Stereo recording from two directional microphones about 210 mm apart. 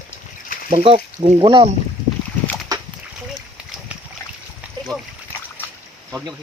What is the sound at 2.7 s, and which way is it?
Splash, 15° right (ahead or behind).